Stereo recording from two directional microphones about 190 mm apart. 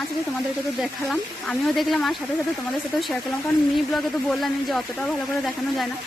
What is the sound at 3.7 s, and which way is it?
Speech, centre (ahead or behind).